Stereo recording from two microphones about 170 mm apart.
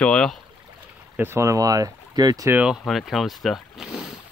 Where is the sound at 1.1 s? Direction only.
15° right (ahead or behind).